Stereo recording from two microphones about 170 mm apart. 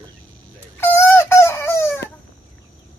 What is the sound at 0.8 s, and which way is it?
Fowl, 15° left (ahead or behind).